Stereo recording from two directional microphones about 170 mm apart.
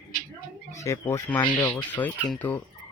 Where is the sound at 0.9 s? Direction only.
15° left (ahead or behind).